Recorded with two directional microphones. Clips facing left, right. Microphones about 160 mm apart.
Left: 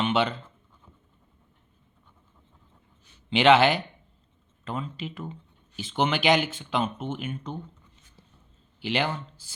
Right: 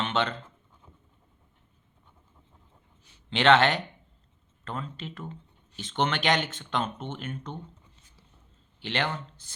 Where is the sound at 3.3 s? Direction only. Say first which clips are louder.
Left 2 dB; 5° left (ahead or behind).